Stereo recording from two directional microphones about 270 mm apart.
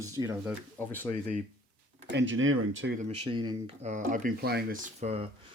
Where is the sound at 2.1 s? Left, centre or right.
Right.